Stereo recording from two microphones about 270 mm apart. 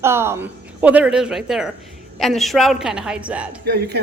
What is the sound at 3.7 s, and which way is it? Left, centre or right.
Speech, right.